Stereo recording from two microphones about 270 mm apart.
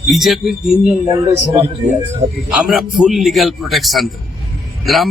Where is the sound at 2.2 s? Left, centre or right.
Right.